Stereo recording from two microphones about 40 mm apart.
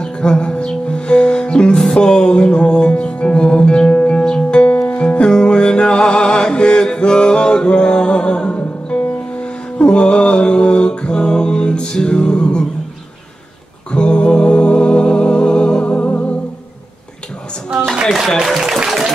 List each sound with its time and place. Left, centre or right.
0.0 s music: left
9.8 s mantra: left
13.9 s music: left
18.6 s a sound: centre